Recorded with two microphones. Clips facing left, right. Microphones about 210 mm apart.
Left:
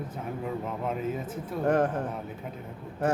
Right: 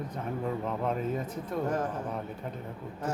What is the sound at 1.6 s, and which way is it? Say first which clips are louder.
Speech: left 8 dB; 65° left (ahead or behind).